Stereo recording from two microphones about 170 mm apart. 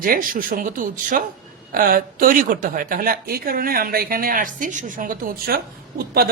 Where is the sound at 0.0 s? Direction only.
55° right (ahead or behind).